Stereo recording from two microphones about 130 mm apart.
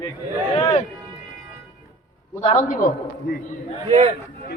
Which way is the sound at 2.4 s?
55° left (ahead or behind).